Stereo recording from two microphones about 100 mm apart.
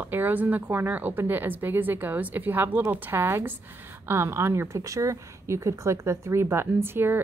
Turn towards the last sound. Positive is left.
turn(degrees=-20)  # may be behind; listen again after turning